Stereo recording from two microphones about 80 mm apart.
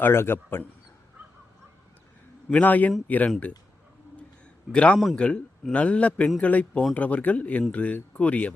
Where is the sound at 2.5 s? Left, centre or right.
Centre.